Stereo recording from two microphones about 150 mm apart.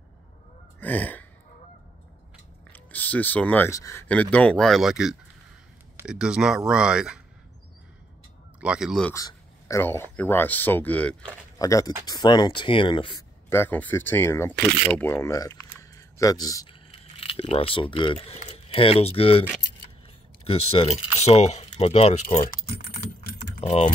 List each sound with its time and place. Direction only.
0.7 s a sound: 10° left (ahead or behind)
2.7 s speech: 10° left (ahead or behind)
4.1 s speech: 10° left (ahead or behind)
8.5 s speech: 5° right (ahead or behind)
9.1 s a man's voice: 20° left (ahead or behind)
11.5 s speech: 25° left (ahead or behind)
13.5 s speech: 15° left (ahead or behind)
16.9 s speech: 35° left (ahead or behind)
20.4 s speech: 40° left (ahead or behind)